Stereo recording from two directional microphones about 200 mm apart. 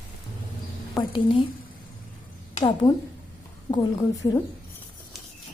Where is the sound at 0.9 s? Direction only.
25° left (ahead or behind).